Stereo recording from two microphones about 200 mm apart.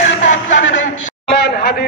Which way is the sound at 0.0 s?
40° left (ahead or behind).